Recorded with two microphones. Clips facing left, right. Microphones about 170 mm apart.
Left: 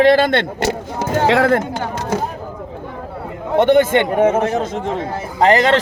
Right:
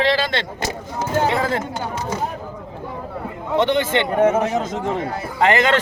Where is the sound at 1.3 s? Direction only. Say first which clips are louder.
Left 7 dB; 75° left (ahead or behind).